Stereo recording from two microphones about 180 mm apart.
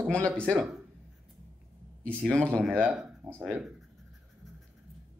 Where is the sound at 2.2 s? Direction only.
5° left (ahead or behind).